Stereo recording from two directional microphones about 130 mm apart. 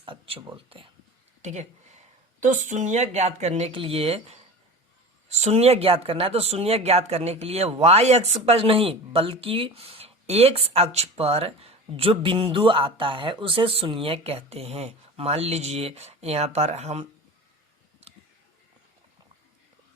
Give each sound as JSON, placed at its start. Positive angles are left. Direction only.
{"t": 0.0, "sound": "a sound", "side_deg": -45}
{"t": 0.5, "sound": "speech", "side_deg": -45}
{"t": 1.4, "sound": "speech", "side_deg": -60}
{"t": 3.7, "sound": "speech", "side_deg": -45}